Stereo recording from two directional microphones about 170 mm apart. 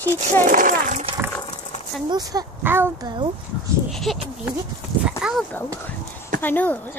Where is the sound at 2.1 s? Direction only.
20° right (ahead or behind).